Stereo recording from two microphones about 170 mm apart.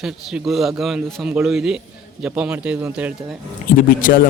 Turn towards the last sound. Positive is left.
turn(degrees=55)  # may be behind; listen again after turning